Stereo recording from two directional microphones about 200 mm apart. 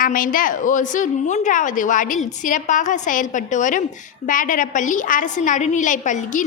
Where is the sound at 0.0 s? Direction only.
45° left (ahead or behind).